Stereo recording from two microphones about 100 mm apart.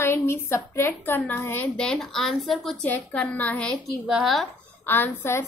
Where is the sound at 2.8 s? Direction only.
15° left (ahead or behind).